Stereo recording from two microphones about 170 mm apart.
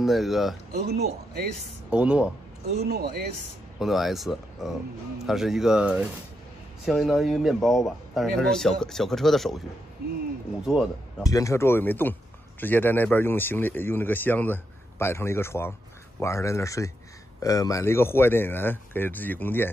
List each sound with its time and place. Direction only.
0.0 s speech: centre (ahead or behind)
0.8 s speech: 70° right (ahead or behind)
1.9 s speech: 5° right (ahead or behind)
2.8 s speech: 70° right (ahead or behind)
3.8 s speech: centre (ahead or behind)
10.6 s speech: centre (ahead or behind)
11.2 s a man's voice: 20° left (ahead or behind)